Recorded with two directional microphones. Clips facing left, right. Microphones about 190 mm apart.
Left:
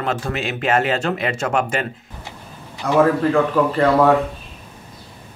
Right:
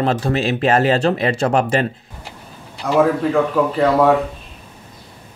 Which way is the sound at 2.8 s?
Centre (ahead or behind).